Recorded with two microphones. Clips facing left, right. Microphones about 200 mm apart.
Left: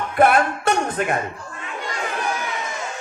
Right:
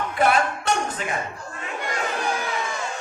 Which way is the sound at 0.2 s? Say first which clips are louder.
Left 5 dB; 55° left (ahead or behind).